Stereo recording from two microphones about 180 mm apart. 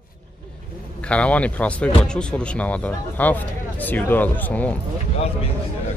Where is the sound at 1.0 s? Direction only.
5° left (ahead or behind).